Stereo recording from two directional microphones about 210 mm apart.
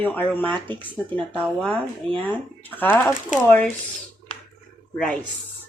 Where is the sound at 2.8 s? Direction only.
10° left (ahead or behind).